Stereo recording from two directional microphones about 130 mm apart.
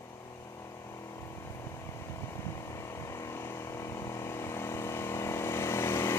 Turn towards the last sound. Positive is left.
turn(degrees=20)  # may be behind; listen again after turning